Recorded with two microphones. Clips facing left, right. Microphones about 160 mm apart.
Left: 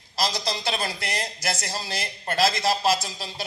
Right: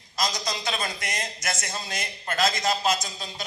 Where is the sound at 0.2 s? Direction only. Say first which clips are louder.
Left 2 dB; 30° left (ahead or behind).